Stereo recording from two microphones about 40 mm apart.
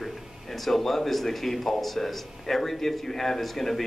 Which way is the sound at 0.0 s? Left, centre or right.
Centre.